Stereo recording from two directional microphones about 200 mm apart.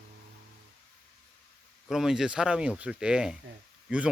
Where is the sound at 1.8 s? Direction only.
Centre (ahead or behind).